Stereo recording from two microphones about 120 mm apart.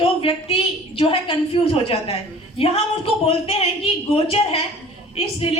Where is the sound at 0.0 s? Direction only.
50° left (ahead or behind).